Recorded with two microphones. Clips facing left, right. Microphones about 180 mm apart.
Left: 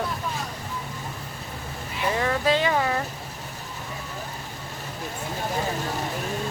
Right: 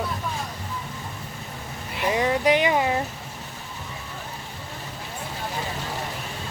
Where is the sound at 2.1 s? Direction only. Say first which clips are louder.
Right 2 dB; 15° right (ahead or behind).